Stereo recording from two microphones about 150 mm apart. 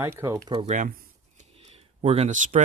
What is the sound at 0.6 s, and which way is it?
Speech, 55° right (ahead or behind).